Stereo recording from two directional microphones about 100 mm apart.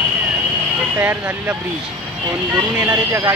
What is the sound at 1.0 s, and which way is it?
Speech, 20° right (ahead or behind).